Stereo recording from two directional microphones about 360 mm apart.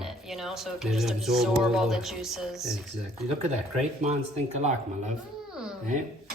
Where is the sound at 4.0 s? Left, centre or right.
Centre.